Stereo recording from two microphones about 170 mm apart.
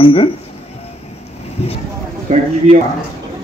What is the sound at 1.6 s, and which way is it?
Speech, 35° left (ahead or behind).